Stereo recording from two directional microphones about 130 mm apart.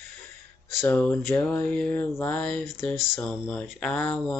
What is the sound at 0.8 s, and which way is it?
Mantra, 10° left (ahead or behind).